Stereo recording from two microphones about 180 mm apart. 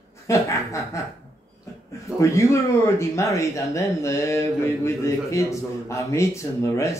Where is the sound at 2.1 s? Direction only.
15° left (ahead or behind).